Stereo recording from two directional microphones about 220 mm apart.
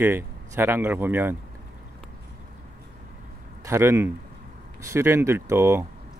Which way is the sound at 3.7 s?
10° right (ahead or behind).